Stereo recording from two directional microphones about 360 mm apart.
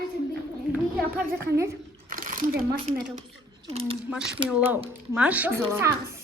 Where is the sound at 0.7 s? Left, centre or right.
Centre.